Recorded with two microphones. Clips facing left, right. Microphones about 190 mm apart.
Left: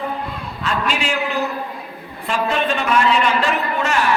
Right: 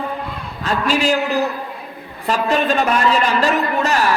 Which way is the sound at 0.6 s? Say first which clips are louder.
Right 4 dB; 40° right (ahead or behind).